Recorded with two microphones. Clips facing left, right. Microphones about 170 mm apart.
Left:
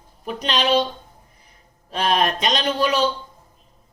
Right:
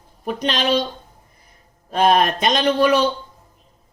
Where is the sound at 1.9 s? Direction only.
50° right (ahead or behind).